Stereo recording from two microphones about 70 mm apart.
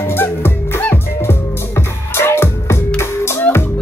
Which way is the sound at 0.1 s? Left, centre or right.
Left.